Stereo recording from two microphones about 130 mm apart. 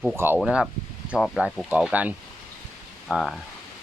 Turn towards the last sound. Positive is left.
turn(degrees=0)  # may be behind; listen again after turning